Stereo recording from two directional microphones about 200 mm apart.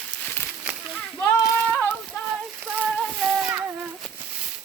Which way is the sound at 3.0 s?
Centre (ahead or behind).